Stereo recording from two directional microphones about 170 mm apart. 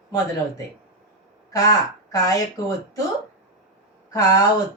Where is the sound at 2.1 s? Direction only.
20° left (ahead or behind).